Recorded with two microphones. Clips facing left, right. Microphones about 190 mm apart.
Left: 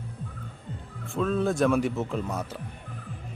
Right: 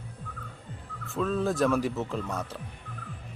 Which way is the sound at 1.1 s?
Centre (ahead or behind).